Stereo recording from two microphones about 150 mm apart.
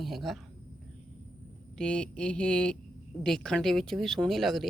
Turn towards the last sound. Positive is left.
turn(degrees=0)  # may be behind; listen again after turning